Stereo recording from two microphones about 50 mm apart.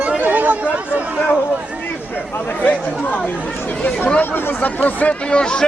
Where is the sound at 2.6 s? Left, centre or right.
Left.